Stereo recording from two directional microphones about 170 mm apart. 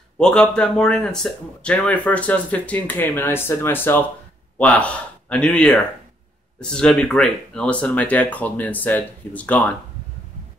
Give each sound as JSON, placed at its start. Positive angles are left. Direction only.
{"t": 0.2, "sound": "speech", "side_deg": 5}